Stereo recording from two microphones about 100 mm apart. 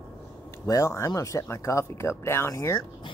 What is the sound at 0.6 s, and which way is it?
Speech, 35° left (ahead or behind).